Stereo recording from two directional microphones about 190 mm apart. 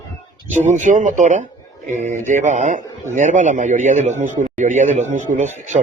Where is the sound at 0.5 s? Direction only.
40° right (ahead or behind).